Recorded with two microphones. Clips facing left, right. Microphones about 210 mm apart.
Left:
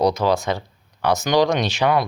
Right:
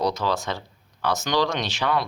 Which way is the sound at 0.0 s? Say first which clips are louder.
Left 6 dB; 15° left (ahead or behind).